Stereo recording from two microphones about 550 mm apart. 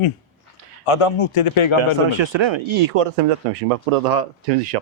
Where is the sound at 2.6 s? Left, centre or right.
Right.